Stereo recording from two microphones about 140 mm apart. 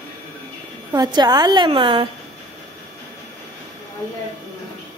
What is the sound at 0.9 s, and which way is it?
A woman's voice, 30° right (ahead or behind).